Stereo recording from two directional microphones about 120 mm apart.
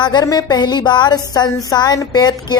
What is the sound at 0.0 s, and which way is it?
A woman's voice, 35° left (ahead or behind).